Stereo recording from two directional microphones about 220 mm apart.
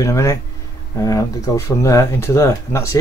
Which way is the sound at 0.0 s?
15° left (ahead or behind).